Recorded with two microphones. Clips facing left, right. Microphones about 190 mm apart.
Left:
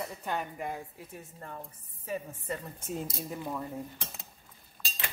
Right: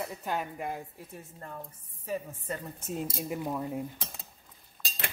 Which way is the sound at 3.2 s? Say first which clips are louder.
Right 3 dB; 15° right (ahead or behind).